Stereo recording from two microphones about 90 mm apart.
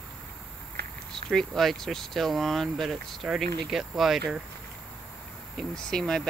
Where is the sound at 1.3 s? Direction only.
5° left (ahead or behind).